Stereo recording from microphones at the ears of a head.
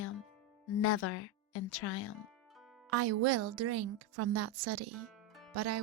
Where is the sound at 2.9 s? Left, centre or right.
Right.